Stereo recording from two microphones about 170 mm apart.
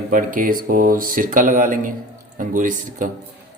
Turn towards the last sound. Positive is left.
turn(degrees=-50)  # may be behind; listen again after turning